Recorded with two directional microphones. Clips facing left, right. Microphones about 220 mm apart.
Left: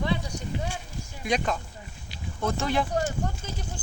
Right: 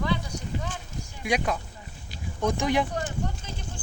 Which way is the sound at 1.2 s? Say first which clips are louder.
Even; 10° right (ahead or behind).